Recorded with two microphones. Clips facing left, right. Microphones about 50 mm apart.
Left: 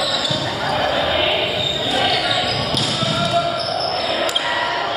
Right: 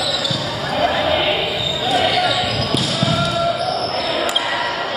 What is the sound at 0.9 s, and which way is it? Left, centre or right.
Basketball bounce, right.